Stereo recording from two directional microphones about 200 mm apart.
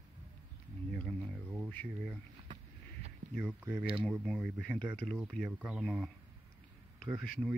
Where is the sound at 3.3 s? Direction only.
Centre (ahead or behind).